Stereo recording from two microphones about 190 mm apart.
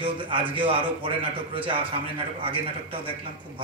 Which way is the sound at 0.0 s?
25° right (ahead or behind).